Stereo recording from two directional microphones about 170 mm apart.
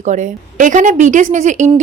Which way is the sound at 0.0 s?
45° right (ahead or behind).